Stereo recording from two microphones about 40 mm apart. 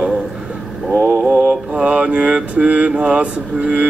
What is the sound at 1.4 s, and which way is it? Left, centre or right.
Mantra, right.